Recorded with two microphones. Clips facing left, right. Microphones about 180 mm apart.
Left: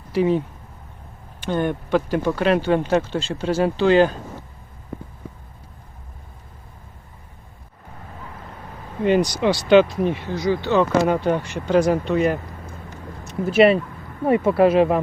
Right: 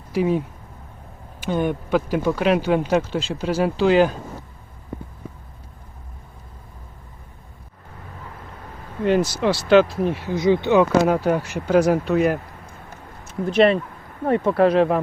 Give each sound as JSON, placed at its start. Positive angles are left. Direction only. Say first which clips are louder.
{"t": 0.1, "sound": "speech", "louder": "left 1 dB", "side_deg": -5}
{"t": 9.0, "sound": "speech", "louder": "left 1 dB", "side_deg": 0}
{"t": 10.3, "sound": "speech", "louder": "right 6 dB", "side_deg": -20}
{"t": 10.8, "sound": "speech", "louder": "right 1 dB", "side_deg": -5}